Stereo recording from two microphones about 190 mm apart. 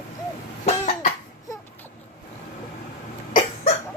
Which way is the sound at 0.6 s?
40° left (ahead or behind).